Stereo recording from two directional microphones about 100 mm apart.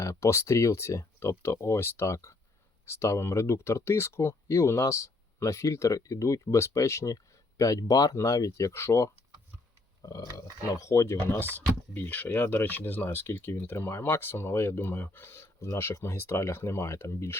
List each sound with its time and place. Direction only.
0.0 s speech: 30° left (ahead or behind)